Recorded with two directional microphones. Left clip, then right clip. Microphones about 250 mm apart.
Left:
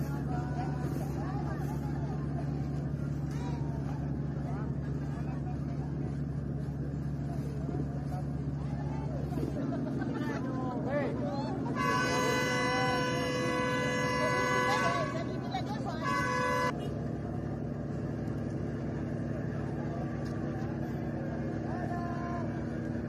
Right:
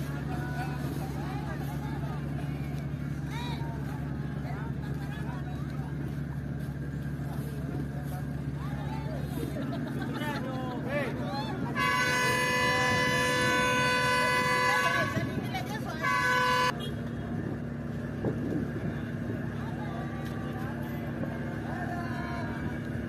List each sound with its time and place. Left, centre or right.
11.7 s music: left
16.0 s toot: left